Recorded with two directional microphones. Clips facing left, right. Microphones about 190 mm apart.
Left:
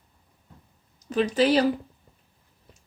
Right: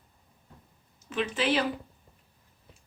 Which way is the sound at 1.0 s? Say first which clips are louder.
Left 7 dB; 40° left (ahead or behind).